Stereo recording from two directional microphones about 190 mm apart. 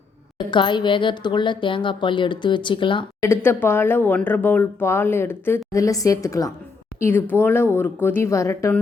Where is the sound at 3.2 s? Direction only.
10° left (ahead or behind).